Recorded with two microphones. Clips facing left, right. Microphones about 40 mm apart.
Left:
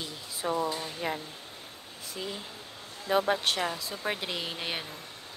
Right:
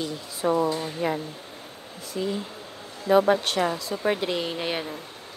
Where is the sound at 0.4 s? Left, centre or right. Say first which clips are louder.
Right 7 dB; right.